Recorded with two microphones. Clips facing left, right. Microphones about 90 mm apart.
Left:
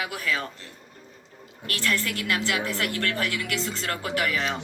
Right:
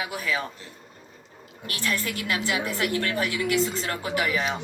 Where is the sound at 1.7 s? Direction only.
15° right (ahead or behind).